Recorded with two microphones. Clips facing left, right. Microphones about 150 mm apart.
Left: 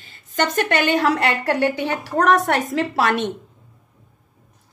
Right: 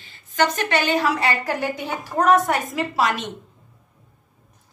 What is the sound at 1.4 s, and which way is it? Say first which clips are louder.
Speech: left 5 dB; 75° left (ahead or behind).